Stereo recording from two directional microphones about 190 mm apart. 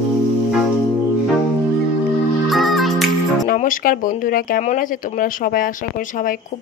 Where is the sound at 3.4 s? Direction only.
45° left (ahead or behind).